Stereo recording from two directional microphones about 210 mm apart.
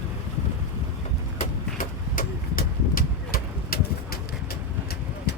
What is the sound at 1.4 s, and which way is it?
Vehicle, 40° left (ahead or behind).